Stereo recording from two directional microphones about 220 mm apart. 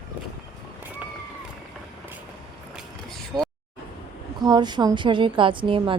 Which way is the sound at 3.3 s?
10° right (ahead or behind).